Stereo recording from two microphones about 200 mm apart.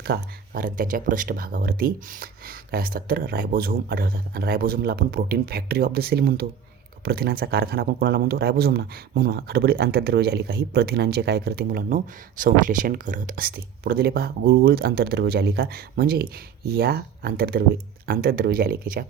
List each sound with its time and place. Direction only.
0.0 s speech: 50° right (ahead or behind)